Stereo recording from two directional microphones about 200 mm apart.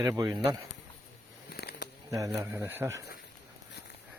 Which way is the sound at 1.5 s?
50° left (ahead or behind).